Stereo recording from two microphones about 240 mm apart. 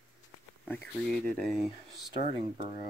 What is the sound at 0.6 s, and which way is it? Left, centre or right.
Speech, centre.